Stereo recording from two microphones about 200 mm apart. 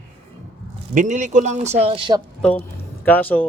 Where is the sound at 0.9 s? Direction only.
40° right (ahead or behind).